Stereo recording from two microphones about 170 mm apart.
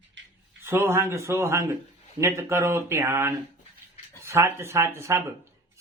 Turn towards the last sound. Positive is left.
turn(degrees=-15)  # may be behind; listen again after turning